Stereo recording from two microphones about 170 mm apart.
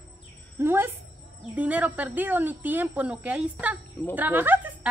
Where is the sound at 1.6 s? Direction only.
10° right (ahead or behind).